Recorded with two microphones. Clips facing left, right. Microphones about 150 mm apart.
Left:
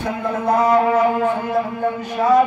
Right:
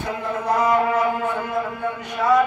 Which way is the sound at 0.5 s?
40° left (ahead or behind).